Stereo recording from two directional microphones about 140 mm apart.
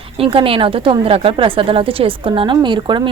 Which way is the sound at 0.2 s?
40° right (ahead or behind).